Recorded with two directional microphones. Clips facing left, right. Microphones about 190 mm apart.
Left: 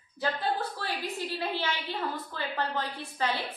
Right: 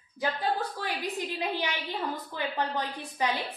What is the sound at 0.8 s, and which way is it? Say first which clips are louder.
A woman's voice: right 1 dB; 15° right (ahead or behind).